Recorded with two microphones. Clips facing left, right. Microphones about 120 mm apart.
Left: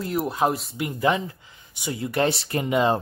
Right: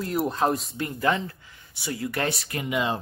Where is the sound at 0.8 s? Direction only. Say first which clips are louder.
Left 4 dB; 15° left (ahead or behind).